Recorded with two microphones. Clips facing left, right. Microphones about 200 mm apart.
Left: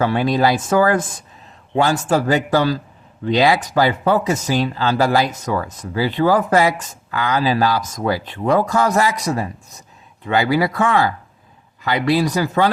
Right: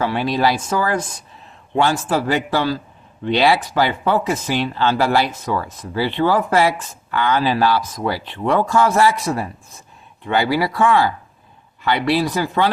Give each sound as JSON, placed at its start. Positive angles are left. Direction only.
{"t": 0.0, "sound": "speech", "side_deg": 50}